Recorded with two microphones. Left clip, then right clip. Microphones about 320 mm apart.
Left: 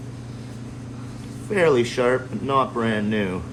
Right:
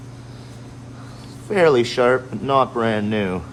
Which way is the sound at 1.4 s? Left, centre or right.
Right.